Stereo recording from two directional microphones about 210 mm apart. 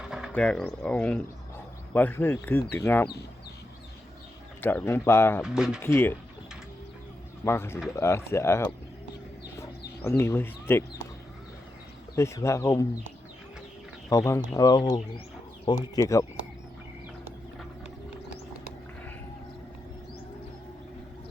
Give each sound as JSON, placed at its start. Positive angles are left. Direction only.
{"t": 0.0, "sound": "speech", "side_deg": -5}
{"t": 4.6, "sound": "speech", "side_deg": 10}
{"t": 5.4, "sound": "speech", "side_deg": -5}
{"t": 5.8, "sound": "speech", "side_deg": 10}
{"t": 7.4, "sound": "speech", "side_deg": 10}
{"t": 10.0, "sound": "speech", "side_deg": 10}
{"t": 12.1, "sound": "speech", "side_deg": 15}
{"t": 14.1, "sound": "speech", "side_deg": 15}